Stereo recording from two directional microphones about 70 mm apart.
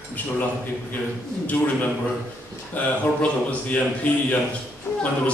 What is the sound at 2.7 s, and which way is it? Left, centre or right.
A man's voice, left.